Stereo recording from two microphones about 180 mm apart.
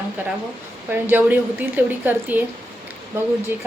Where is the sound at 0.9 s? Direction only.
10° right (ahead or behind).